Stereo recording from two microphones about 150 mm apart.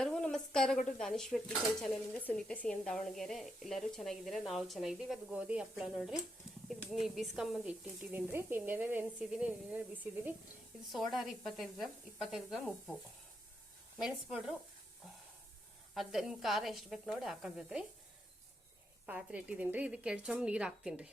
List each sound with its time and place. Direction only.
0.0 s a sound: 5° left (ahead or behind)
0.9 s speech: 5° left (ahead or behind)
10.8 s speech: centre (ahead or behind)
14.0 s speech: 5° right (ahead or behind)
16.0 s speech: centre (ahead or behind)
19.0 s speech: 10° right (ahead or behind)